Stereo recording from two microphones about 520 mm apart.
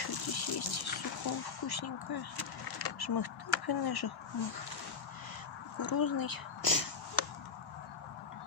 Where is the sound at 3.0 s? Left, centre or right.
Left.